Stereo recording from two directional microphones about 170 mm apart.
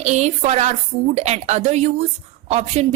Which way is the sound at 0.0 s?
40° right (ahead or behind).